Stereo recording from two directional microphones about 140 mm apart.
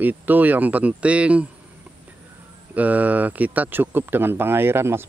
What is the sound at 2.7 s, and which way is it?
Speech, 10° right (ahead or behind).